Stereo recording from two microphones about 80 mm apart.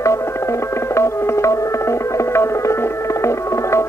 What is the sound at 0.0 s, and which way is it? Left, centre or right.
Music, left.